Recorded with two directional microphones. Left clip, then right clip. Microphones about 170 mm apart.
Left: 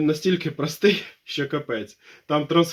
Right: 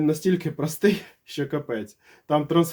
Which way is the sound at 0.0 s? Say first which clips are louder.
Left 1 dB; 25° right (ahead or behind).